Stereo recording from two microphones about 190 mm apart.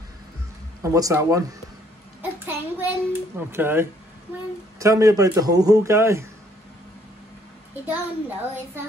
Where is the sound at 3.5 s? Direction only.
10° right (ahead or behind).